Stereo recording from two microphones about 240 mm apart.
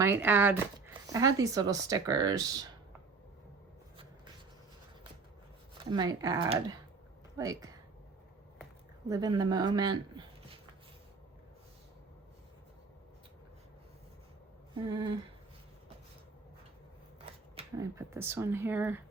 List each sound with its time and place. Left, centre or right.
0.0 s speech: centre
5.7 s speech: centre
9.0 s speech: centre
14.8 s a sound: centre
17.5 s a sound: right
17.9 s speech: centre